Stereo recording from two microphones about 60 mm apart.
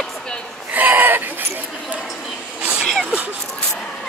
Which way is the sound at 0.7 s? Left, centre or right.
Right.